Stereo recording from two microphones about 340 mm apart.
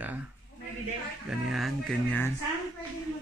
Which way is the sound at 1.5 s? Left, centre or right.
Centre.